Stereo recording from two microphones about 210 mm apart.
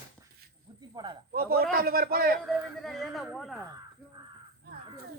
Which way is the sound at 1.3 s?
45° right (ahead or behind).